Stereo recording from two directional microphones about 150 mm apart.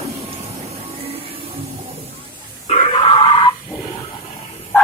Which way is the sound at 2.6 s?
45° left (ahead or behind).